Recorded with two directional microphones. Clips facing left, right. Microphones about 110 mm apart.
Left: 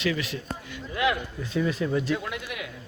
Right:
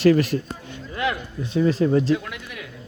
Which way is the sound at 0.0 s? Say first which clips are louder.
Right 11 dB; 45° right (ahead or behind).